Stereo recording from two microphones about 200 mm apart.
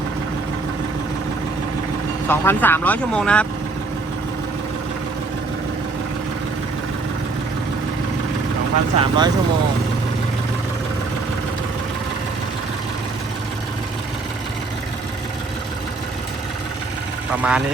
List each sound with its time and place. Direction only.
2.2 s speech: 10° left (ahead or behind)
9.0 s speech: 20° right (ahead or behind)
17.3 s speech: 5° right (ahead or behind)